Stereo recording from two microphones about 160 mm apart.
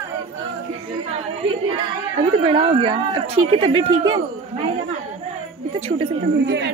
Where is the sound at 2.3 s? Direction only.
35° right (ahead or behind).